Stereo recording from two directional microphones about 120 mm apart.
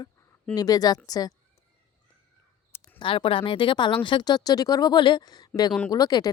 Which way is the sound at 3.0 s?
45° left (ahead or behind).